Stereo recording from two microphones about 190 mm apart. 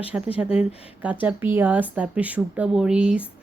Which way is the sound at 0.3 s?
5° right (ahead or behind).